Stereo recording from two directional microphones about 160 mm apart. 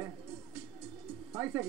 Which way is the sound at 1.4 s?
15° right (ahead or behind).